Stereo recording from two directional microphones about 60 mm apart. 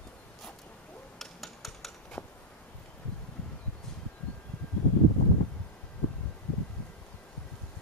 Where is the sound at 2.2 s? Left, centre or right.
Left.